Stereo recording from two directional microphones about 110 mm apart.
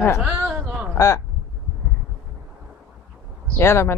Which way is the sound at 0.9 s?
30° left (ahead or behind).